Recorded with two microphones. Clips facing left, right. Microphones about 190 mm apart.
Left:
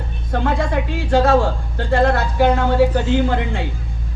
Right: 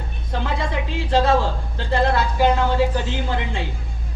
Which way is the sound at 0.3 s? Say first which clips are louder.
Left 5 dB; 55° left (ahead or behind).